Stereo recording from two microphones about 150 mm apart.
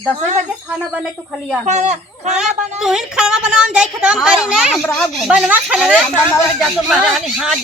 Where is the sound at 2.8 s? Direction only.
5° right (ahead or behind).